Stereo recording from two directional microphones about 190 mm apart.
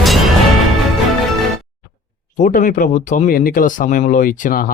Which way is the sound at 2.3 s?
45° left (ahead or behind).